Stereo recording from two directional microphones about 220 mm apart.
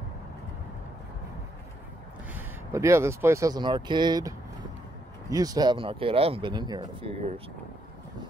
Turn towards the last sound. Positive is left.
turn(degrees=-25)  # may be behind; listen again after turning